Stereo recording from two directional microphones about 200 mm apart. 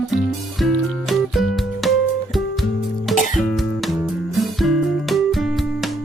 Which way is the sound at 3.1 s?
40° left (ahead or behind).